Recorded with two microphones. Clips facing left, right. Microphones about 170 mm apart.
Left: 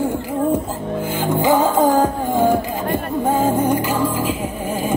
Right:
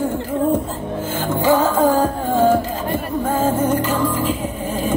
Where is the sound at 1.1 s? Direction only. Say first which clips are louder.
Even; 15° left (ahead or behind).